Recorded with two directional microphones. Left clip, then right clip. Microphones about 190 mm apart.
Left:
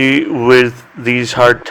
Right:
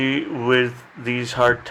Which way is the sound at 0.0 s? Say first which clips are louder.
Left 10 dB; 35° left (ahead or behind).